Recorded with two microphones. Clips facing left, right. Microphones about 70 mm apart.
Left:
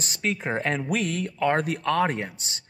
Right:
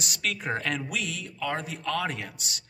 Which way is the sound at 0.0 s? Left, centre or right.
Left.